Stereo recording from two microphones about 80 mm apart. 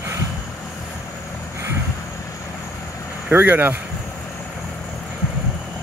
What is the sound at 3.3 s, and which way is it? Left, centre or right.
Speech, right.